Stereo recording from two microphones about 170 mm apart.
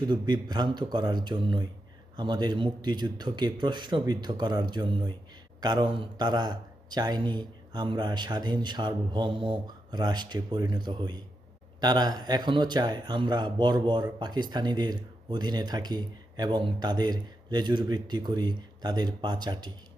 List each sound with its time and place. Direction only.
0.1 s speech: 25° right (ahead or behind)